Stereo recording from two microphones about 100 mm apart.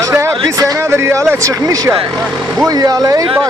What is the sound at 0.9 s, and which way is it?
Speech, 25° right (ahead or behind).